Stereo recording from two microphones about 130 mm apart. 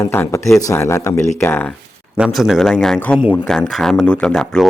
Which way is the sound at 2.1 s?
5° right (ahead or behind).